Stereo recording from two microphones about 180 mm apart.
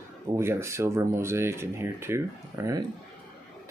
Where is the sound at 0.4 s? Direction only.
15° right (ahead or behind).